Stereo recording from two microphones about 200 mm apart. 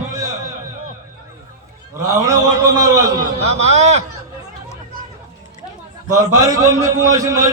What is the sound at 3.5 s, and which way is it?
Speech, 30° right (ahead or behind).